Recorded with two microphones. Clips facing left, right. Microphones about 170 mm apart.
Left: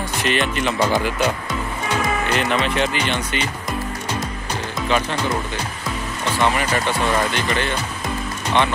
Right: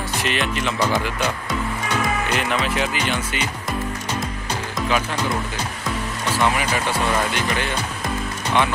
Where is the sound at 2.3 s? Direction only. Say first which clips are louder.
Left 4 dB; 5° right (ahead or behind).